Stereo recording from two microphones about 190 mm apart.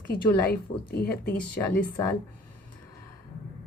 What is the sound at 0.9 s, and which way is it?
Speech, 55° left (ahead or behind).